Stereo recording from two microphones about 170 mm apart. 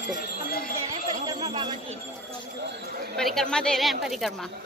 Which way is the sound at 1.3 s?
20° right (ahead or behind).